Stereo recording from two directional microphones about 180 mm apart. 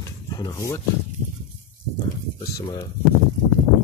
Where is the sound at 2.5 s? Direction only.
25° left (ahead or behind).